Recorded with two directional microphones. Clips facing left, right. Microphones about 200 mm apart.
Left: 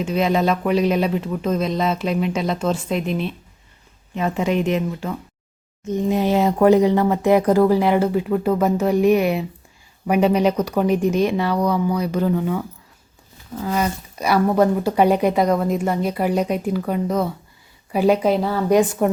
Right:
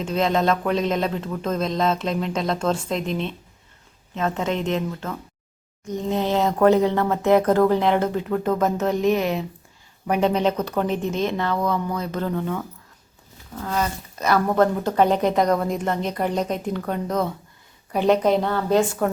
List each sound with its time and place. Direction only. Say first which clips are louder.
0.0 s speech: left 2 dB; 10° left (ahead or behind)
18.8 s speech: left 4 dB; 15° left (ahead or behind)